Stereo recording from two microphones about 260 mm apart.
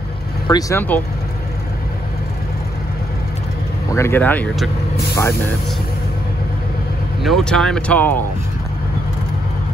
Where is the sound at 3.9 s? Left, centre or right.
Centre.